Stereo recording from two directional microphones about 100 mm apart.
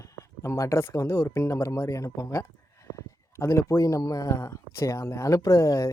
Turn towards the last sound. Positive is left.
turn(degrees=30)  # may be behind; listen again after turning